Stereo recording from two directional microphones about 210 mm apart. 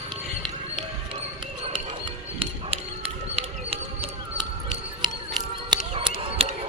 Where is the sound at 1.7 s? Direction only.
25° right (ahead or behind).